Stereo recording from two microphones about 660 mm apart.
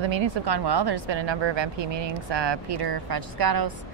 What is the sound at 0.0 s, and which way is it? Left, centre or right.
Speech, right.